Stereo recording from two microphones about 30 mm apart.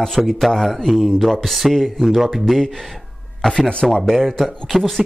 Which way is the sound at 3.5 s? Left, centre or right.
Left.